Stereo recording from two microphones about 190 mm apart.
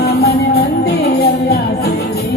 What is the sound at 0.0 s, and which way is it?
Music, 55° left (ahead or behind).